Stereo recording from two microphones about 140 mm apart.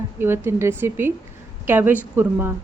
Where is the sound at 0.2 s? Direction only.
15° right (ahead or behind).